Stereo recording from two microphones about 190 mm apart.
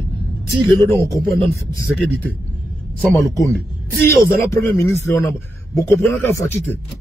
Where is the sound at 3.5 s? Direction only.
10° left (ahead or behind).